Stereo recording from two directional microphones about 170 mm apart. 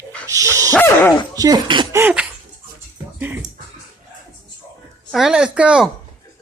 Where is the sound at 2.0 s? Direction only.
10° right (ahead or behind).